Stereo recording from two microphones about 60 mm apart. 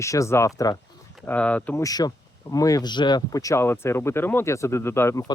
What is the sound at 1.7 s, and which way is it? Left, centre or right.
Speech, left.